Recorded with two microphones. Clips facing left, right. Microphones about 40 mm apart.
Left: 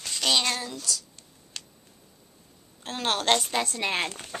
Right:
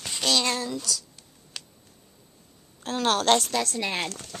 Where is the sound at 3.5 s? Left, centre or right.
Left.